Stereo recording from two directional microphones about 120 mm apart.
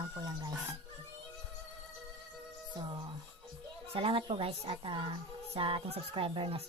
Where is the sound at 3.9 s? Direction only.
50° right (ahead or behind).